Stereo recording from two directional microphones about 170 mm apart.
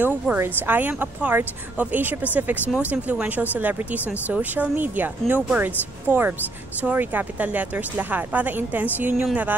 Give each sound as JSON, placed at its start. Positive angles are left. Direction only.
{"t": 0.0, "sound": "speech", "side_deg": -10}